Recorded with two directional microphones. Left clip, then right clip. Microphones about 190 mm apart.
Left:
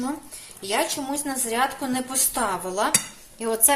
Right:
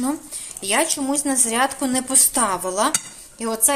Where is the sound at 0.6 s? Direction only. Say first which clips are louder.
Right 4 dB; 40° right (ahead or behind).